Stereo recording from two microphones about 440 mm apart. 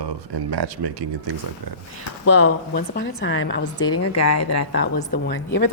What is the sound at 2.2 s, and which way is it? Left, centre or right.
A woman's voice, left.